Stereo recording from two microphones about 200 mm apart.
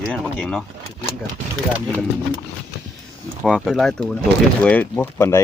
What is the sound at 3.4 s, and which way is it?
Speech, centre (ahead or behind).